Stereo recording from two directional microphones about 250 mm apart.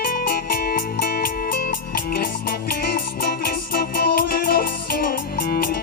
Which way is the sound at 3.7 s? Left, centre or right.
Left.